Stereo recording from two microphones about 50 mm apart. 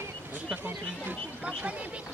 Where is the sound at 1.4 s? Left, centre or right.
Right.